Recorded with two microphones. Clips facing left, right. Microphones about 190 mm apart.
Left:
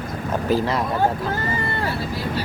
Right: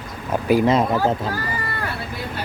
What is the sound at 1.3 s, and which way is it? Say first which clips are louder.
Speech: left 2 dB; 25° left (ahead or behind).